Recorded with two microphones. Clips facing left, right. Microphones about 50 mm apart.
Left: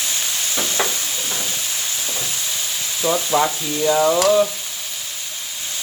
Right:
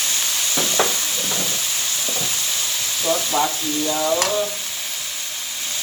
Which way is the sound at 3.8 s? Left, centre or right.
Left.